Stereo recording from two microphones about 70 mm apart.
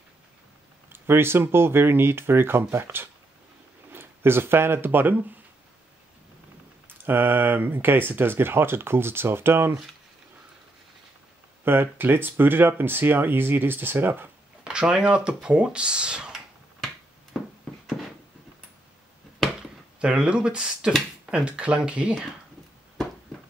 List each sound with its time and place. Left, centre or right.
0.8 s speech: right
7.1 s speech: right
11.6 s speech: right
14.6 s speech: centre
17.3 s a sound: centre
20.0 s speech: centre